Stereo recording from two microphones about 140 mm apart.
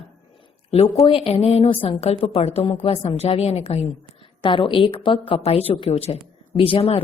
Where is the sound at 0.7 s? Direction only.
45° left (ahead or behind).